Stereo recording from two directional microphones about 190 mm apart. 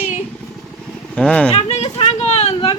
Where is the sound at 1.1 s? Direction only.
5° left (ahead or behind).